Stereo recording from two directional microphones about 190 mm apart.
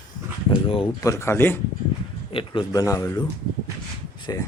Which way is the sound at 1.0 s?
15° left (ahead or behind).